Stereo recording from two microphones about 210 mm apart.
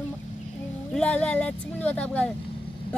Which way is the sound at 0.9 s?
5° left (ahead or behind).